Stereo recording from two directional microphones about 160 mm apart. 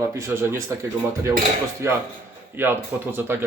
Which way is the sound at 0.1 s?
15° right (ahead or behind).